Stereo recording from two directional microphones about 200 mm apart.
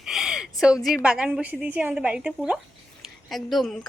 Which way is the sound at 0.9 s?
5° right (ahead or behind).